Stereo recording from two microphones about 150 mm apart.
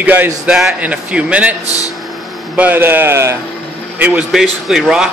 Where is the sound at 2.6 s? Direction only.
15° right (ahead or behind).